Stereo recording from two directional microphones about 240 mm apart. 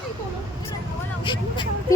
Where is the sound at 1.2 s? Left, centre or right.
Centre.